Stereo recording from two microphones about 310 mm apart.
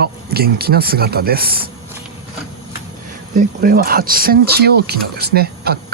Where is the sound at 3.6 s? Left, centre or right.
Right.